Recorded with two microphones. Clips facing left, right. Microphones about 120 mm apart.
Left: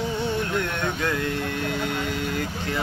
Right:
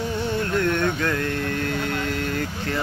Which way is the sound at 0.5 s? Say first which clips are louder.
Right 4 dB; 15° left (ahead or behind).